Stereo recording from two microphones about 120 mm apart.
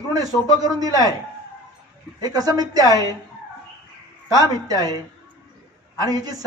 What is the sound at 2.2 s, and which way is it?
Speech, 35° right (ahead or behind).